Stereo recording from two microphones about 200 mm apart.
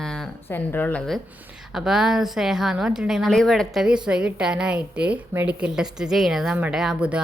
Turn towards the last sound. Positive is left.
turn(degrees=-5)  # may be behind; listen again after turning